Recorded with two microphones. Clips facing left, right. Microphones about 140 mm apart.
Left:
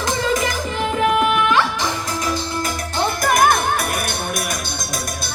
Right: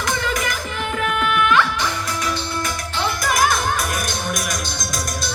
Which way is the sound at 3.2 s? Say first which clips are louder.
Left 4 dB; 55° left (ahead or behind).